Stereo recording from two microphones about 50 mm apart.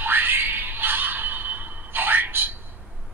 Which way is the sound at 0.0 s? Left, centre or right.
Right.